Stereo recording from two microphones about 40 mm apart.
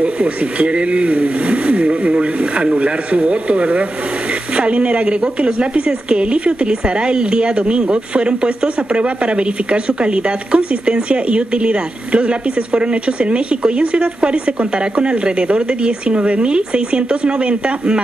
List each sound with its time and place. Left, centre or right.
0.0 s a woman's voice: right